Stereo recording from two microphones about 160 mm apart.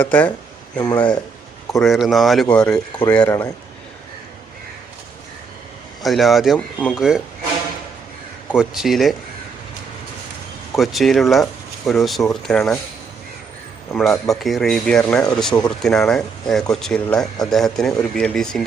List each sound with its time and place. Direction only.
0.0 s speech: 10° left (ahead or behind)
0.8 s speech: 25° left (ahead or behind)
1.8 s speech: centre (ahead or behind)
6.0 s speech: centre (ahead or behind)
8.5 s speech: centre (ahead or behind)
10.8 s speech: centre (ahead or behind)
14.0 s speech: centre (ahead or behind)